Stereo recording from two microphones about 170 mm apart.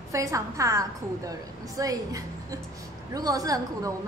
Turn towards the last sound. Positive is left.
turn(degrees=-20)  # may be behind; listen again after turning